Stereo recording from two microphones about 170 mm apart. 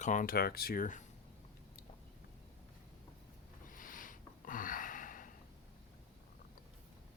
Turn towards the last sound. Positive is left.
turn(degrees=50)  # may be behind; listen again after turning